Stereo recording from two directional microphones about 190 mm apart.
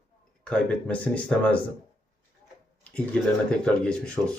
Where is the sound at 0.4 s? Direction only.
5° left (ahead or behind).